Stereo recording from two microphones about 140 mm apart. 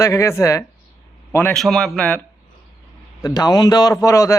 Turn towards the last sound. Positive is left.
turn(degrees=20)  # may be behind; listen again after turning